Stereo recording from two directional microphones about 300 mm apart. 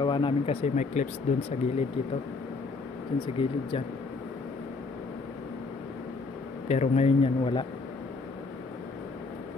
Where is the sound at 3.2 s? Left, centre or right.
Centre.